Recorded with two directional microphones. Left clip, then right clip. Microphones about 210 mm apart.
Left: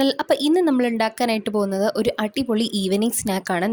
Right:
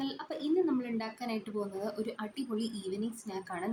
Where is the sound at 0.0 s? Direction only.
55° left (ahead or behind).